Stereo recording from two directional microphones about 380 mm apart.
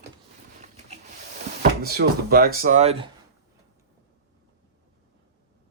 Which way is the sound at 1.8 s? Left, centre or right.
Right.